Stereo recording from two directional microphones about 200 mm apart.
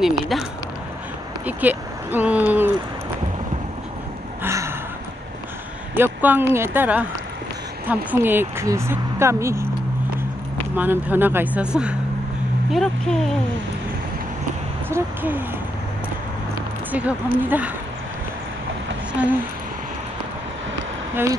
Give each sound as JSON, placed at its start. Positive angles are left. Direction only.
{"t": 0.0, "sound": "speech", "side_deg": 0}
{"t": 4.4, "sound": "gasp", "side_deg": -15}
{"t": 5.9, "sound": "a woman's voice", "side_deg": -10}
{"t": 10.8, "sound": "a woman's voice", "side_deg": -10}
{"t": 14.9, "sound": "a woman's voice", "side_deg": -10}
{"t": 16.9, "sound": "a woman's voice", "side_deg": -10}
{"t": 21.1, "sound": "speech", "side_deg": -10}